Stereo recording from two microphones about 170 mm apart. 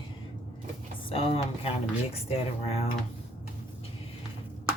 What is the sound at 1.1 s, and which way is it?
Speech, 35° left (ahead or behind).